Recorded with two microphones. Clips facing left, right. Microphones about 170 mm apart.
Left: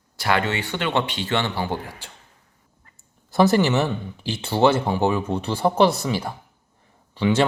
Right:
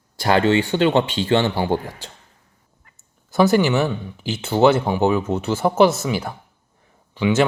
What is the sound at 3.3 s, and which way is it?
Speech, centre (ahead or behind).